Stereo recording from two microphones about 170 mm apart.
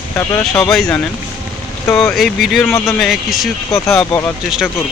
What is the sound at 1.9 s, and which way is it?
Speech, 10° left (ahead or behind).